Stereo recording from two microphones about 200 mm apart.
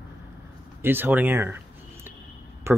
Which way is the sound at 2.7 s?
10° right (ahead or behind).